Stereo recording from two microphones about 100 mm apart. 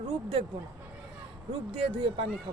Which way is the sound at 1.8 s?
60° right (ahead or behind).